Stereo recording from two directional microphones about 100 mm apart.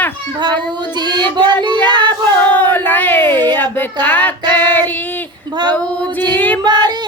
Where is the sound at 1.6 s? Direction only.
50° right (ahead or behind).